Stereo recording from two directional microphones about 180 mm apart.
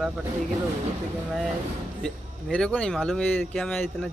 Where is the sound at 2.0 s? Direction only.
5° left (ahead or behind).